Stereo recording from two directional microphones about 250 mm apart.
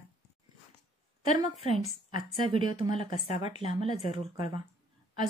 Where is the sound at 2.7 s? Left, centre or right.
Left.